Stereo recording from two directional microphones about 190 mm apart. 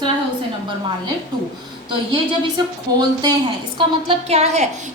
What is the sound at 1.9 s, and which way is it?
A woman's voice, 25° right (ahead or behind).